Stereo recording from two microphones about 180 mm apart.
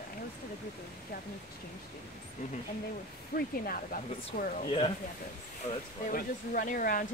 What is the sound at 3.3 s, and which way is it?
Speech, 55° left (ahead or behind).